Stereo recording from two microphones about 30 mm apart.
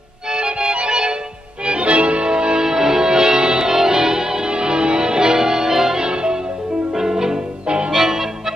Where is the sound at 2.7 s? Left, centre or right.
Centre.